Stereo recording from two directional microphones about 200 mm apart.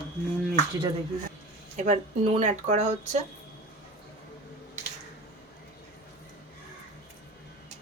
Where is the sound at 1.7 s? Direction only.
35° right (ahead or behind).